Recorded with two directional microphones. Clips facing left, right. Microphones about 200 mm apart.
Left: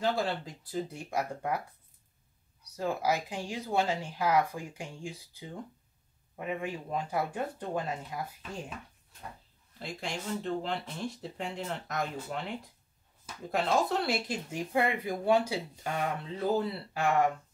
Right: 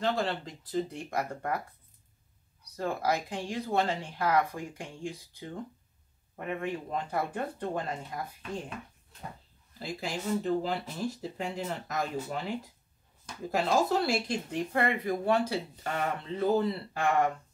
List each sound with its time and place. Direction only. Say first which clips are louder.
0.0 s speech: even; 10° left (ahead or behind)
2.7 s speech: even; 5° left (ahead or behind)
9.8 s speech: right 2 dB; centre (ahead or behind)